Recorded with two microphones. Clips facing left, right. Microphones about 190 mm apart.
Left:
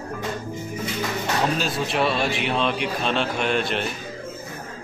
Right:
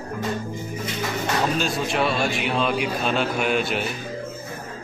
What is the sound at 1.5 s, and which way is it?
A man's voice, centre (ahead or behind).